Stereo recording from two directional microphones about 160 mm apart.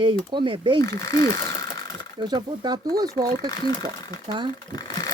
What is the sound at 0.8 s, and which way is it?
Speech, 20° left (ahead or behind).